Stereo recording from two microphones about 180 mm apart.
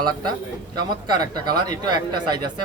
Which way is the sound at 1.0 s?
25° right (ahead or behind).